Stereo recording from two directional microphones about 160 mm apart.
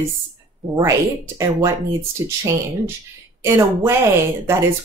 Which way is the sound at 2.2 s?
20° right (ahead or behind).